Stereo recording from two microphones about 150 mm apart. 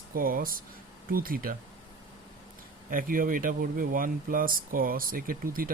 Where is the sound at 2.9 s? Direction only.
65° right (ahead or behind).